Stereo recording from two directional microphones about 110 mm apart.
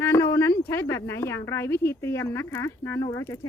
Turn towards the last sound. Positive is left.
turn(degrees=30)  # may be behind; listen again after turning